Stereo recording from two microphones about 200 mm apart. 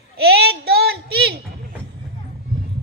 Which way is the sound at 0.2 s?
50° right (ahead or behind).